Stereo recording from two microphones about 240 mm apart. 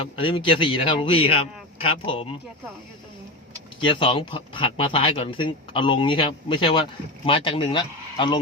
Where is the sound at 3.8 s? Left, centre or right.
Left.